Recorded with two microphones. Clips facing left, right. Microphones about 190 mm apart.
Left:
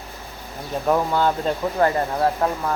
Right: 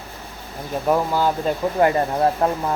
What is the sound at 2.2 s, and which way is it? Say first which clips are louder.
Speech: right 2 dB; 20° right (ahead or behind).